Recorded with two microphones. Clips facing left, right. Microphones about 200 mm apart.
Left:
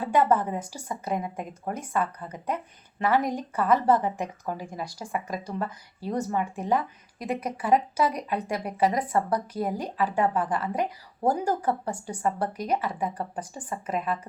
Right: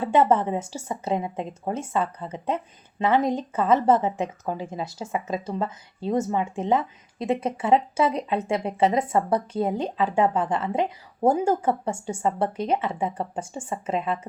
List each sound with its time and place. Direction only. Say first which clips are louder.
0.0 s a woman's voice: right 3 dB; 25° right (ahead or behind)